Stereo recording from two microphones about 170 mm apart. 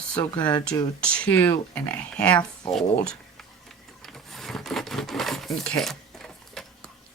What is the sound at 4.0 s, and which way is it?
Mechanisms, centre (ahead or behind).